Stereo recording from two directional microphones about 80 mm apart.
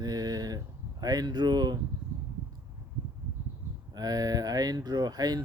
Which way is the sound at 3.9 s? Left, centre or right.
Right.